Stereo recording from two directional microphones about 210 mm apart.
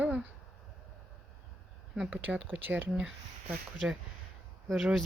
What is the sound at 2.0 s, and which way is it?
Speech, 5° right (ahead or behind).